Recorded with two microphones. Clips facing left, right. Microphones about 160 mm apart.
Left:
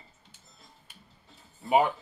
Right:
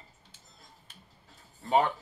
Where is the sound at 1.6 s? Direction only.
15° left (ahead or behind).